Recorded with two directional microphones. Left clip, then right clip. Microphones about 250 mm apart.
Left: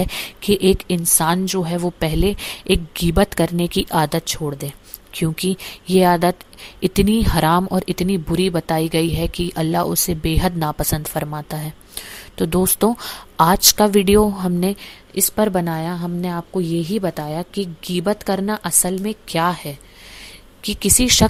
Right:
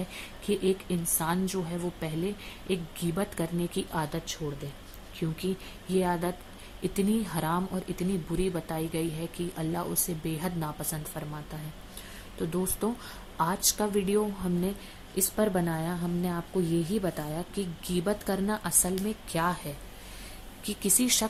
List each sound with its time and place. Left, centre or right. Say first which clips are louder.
0.0 s a woman's voice: left 14 dB; left